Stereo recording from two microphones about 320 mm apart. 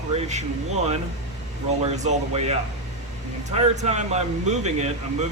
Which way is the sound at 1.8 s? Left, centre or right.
Centre.